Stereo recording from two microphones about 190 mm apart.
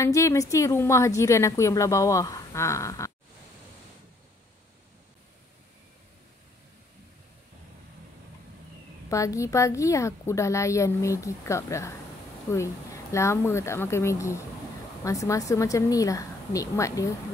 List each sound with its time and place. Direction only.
0.0 s a woman's voice: 15° left (ahead or behind)
9.1 s a woman's voice: 15° left (ahead or behind)